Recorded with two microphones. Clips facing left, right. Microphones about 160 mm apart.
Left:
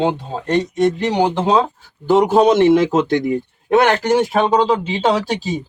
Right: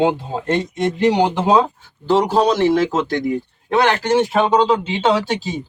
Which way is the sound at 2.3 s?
20° left (ahead or behind).